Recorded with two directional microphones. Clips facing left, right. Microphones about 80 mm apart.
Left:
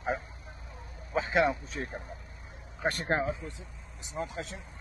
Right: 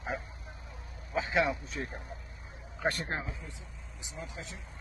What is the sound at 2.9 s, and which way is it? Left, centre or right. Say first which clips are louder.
Speech: left 7 dB; left.